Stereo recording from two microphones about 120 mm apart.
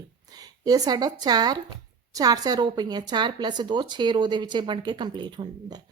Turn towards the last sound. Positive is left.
turn(degrees=-40)  # may be behind; listen again after turning